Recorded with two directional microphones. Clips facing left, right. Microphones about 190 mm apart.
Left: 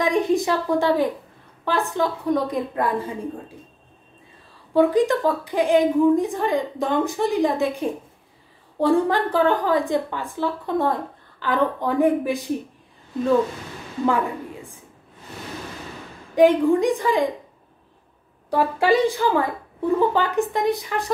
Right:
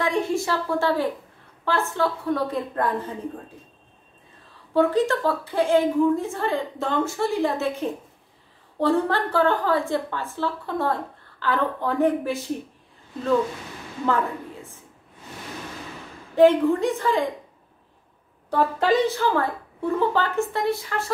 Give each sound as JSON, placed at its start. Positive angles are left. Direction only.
{"t": 0.0, "sound": "a woman's voice", "side_deg": 15}
{"t": 4.7, "sound": "a woman's voice", "side_deg": 15}
{"t": 14.0, "sound": "a woman's voice", "side_deg": 15}
{"t": 16.3, "sound": "a woman's voice", "side_deg": 15}
{"t": 18.5, "sound": "a woman's voice", "side_deg": 10}